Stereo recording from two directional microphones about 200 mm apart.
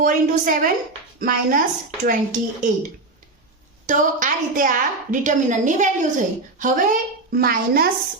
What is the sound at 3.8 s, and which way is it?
A woman's voice, 40° right (ahead or behind).